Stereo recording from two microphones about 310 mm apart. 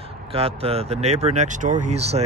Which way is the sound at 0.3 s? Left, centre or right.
Centre.